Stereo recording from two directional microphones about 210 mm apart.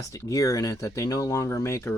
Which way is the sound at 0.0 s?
15° left (ahead or behind).